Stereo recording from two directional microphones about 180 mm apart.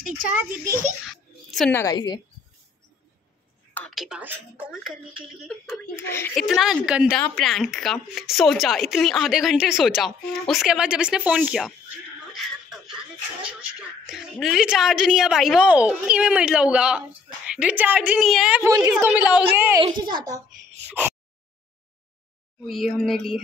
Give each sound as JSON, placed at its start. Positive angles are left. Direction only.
{"t": 1.0, "sound": "a sound", "side_deg": 0}
{"t": 1.7, "sound": "a woman's voice", "side_deg": 20}
{"t": 3.7, "sound": "a woman's voice", "side_deg": 5}
{"t": 5.9, "sound": "a child's voice", "side_deg": 15}
{"t": 6.3, "sound": "a woman's voice", "side_deg": 0}
{"t": 12.6, "sound": "a sound", "side_deg": -5}
{"t": 14.0, "sound": "a woman's voice", "side_deg": -5}
{"t": 19.8, "sound": "a woman's voice", "side_deg": -25}
{"t": 22.7, "sound": "a woman's voice", "side_deg": 0}